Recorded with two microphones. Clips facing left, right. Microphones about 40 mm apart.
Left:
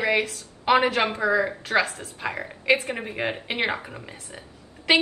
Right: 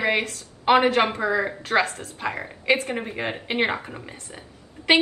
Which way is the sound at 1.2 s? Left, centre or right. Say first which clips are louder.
Left 1 dB; right.